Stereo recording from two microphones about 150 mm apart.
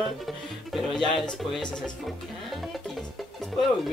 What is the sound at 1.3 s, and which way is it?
Speech, centre (ahead or behind).